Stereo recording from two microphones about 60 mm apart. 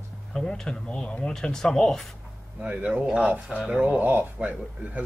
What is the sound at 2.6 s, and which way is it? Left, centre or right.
Speech, right.